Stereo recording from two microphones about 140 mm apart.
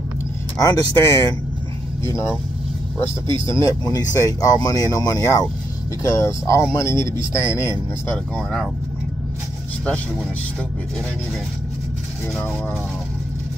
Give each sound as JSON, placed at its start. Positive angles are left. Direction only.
{"t": 0.6, "sound": "speech", "side_deg": 25}
{"t": 3.0, "sound": "speech", "side_deg": 20}
{"t": 8.4, "sound": "speech", "side_deg": 5}